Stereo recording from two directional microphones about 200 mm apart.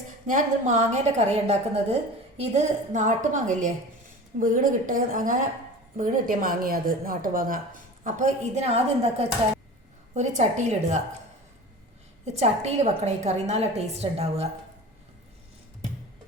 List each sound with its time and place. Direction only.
0.3 s a woman's voice: 40° right (ahead or behind)
12.2 s a woman's voice: 35° right (ahead or behind)